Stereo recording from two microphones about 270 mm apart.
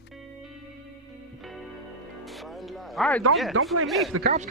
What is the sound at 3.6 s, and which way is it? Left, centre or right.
Speech, right.